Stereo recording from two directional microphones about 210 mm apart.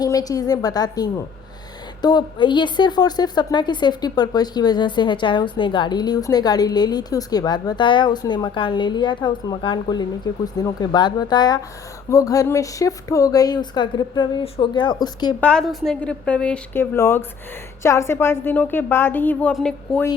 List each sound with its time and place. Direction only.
0.0 s a woman's voice: 20° left (ahead or behind)
15.4 s a woman's voice: 5° left (ahead or behind)